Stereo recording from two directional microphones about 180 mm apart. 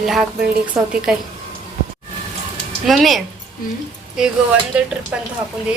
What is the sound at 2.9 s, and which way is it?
A woman's voice, centre (ahead or behind).